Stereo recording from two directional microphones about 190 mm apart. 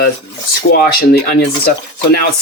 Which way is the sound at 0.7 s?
55° left (ahead or behind).